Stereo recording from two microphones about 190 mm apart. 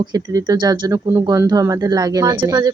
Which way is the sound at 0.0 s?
20° right (ahead or behind).